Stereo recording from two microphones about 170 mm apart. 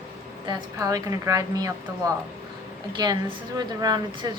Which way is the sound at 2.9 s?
25° right (ahead or behind).